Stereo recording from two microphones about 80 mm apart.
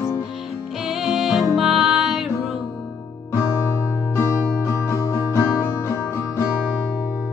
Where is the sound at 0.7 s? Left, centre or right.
Centre.